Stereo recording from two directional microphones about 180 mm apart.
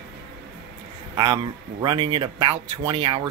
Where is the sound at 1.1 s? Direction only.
25° right (ahead or behind).